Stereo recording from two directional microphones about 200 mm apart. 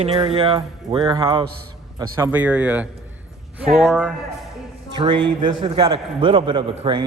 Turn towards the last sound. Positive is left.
turn(degrees=-25)  # may be behind; listen again after turning